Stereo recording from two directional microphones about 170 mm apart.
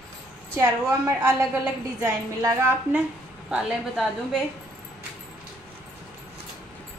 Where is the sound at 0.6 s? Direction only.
20° right (ahead or behind).